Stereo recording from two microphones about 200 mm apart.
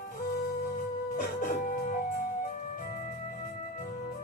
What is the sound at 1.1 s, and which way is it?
Music, 45° left (ahead or behind).